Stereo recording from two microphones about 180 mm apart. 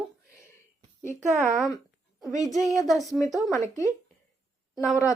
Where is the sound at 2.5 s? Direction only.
Centre (ahead or behind).